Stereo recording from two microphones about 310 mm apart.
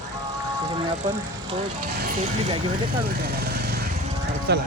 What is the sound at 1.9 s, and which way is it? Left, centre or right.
Speech, right.